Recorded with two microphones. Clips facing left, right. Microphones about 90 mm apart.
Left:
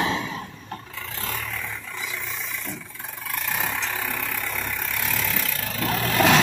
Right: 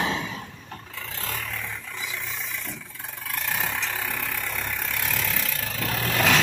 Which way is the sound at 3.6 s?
10° left (ahead or behind).